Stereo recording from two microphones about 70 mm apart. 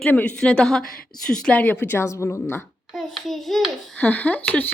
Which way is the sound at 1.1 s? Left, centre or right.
Left.